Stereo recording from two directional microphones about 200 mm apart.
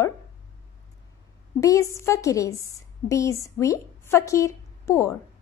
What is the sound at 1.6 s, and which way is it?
A woman's voice, 15° left (ahead or behind).